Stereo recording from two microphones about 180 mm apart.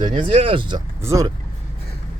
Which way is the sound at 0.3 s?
30° right (ahead or behind).